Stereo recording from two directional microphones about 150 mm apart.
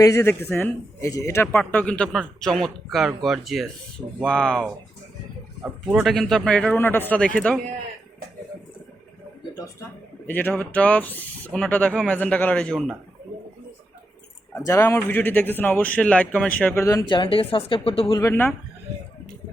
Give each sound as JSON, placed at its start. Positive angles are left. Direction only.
{"t": 0.0, "sound": "speech", "side_deg": 20}
{"t": 1.5, "sound": "speech", "side_deg": 5}
{"t": 10.2, "sound": "speech", "side_deg": 10}
{"t": 14.5, "sound": "speech", "side_deg": 20}
{"t": 16.8, "sound": "speech", "side_deg": 20}
{"t": 17.1, "sound": "speech", "side_deg": 35}
{"t": 18.2, "sound": "speech", "side_deg": 15}